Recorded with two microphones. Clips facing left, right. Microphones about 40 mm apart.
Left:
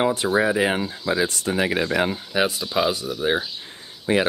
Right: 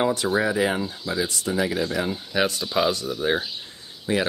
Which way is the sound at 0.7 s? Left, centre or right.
Left.